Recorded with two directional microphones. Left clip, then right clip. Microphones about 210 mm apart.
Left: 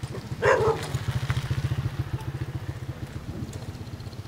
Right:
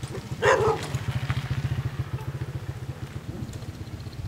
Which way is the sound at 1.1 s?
45° left (ahead or behind).